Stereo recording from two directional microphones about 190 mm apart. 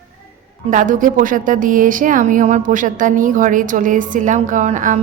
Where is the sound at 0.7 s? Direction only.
45° right (ahead or behind).